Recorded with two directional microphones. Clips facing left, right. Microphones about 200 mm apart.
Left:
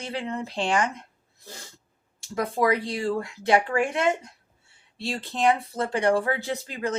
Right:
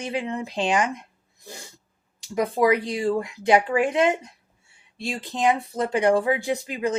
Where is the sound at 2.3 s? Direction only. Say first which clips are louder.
Right 3 dB; 20° right (ahead or behind).